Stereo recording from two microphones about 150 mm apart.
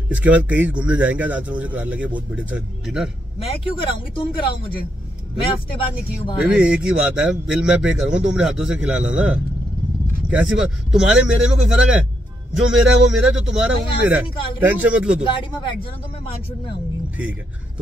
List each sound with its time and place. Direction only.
0.1 s a man's voice: 10° right (ahead or behind)
3.3 s speech: 40° left (ahead or behind)
6.5 s a man's voice: 5° right (ahead or behind)
10.9 s speech: 5° right (ahead or behind)
14.3 s speech: 35° left (ahead or behind)
14.7 s a man's voice: 10° right (ahead or behind)
15.2 s speech: 35° left (ahead or behind)